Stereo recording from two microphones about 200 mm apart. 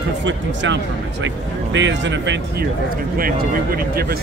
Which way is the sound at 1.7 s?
65° right (ahead or behind).